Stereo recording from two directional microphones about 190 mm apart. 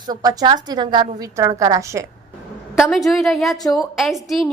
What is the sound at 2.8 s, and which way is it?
A woman's voice, centre (ahead or behind).